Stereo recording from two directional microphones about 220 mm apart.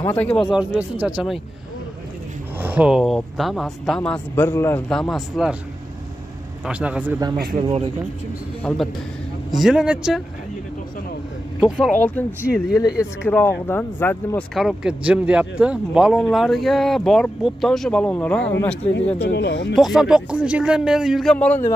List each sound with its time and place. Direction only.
0.0 s speech: 10° left (ahead or behind)
2.6 s speech: 5° right (ahead or behind)
6.6 s a man's voice: 5° right (ahead or behind)
8.7 s speech: 5° left (ahead or behind)
11.6 s speech: centre (ahead or behind)
12.3 s speech: 5° right (ahead or behind)
13.2 s speech: 10° left (ahead or behind)
19.1 s speech: 55° left (ahead or behind)
19.7 s speech: centre (ahead or behind)